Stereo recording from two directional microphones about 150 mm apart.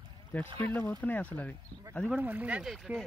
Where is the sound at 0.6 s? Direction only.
10° left (ahead or behind).